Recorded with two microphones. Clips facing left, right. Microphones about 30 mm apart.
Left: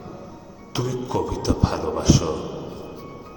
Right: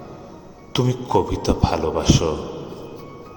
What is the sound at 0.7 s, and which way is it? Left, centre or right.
Speech, right.